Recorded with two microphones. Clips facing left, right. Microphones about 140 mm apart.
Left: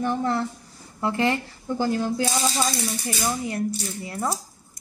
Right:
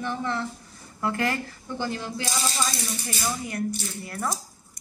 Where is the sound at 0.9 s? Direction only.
25° left (ahead or behind).